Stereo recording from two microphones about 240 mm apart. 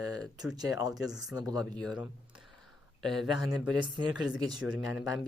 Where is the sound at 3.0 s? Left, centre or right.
Centre.